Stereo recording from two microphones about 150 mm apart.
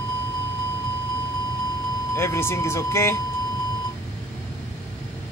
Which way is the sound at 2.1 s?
15° left (ahead or behind).